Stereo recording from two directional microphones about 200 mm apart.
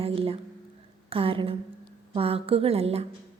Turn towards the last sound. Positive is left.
turn(degrees=-30)  # may be behind; listen again after turning